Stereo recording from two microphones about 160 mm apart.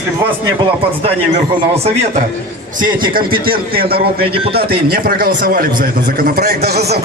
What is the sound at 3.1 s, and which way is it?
A man's voice, 65° right (ahead or behind).